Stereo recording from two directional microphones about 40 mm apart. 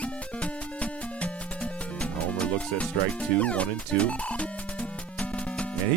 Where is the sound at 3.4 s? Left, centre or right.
Left.